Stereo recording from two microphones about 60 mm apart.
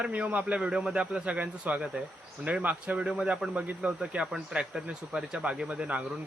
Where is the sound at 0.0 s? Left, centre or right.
Right.